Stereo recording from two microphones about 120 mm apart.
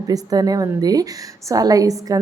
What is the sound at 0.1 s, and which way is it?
A woman's voice, 30° right (ahead or behind).